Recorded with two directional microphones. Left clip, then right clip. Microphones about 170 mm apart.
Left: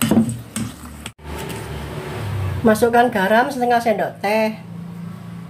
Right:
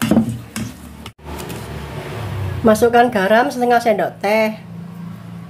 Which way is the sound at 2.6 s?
20° right (ahead or behind).